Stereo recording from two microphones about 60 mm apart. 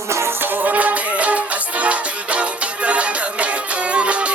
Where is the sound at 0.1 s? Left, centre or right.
Right.